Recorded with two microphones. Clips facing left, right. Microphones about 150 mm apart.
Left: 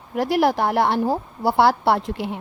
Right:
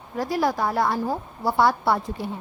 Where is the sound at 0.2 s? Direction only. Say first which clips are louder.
Left 4 dB; 70° left (ahead or behind).